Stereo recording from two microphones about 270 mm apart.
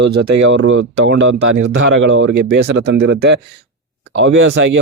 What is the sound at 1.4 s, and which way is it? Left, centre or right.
Speech, right.